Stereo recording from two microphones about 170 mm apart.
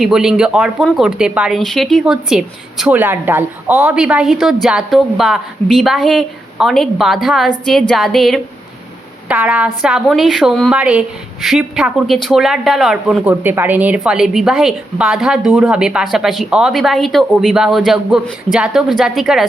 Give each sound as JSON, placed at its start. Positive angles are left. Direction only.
{"t": 0.0, "sound": "a woman's voice", "side_deg": -5}